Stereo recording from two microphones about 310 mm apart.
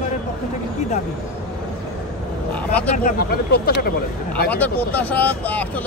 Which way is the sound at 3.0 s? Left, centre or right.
Left.